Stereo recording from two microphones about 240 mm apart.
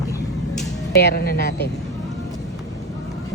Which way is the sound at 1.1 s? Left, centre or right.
Left.